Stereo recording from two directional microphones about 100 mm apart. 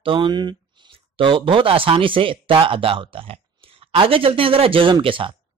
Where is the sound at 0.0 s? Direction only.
60° right (ahead or behind).